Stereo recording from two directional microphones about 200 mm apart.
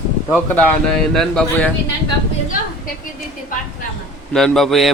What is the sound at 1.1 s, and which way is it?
Speech, centre (ahead or behind).